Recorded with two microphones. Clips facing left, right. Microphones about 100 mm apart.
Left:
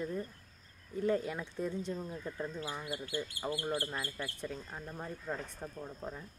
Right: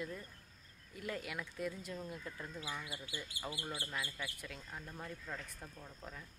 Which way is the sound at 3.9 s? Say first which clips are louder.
Left 4 dB; 35° left (ahead or behind).